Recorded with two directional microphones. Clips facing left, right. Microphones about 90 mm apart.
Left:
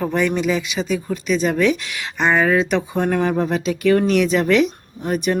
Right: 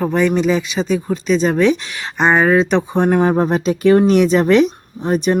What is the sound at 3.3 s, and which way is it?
Speech, 40° right (ahead or behind).